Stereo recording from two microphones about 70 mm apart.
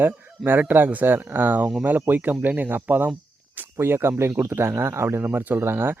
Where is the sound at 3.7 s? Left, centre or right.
Right.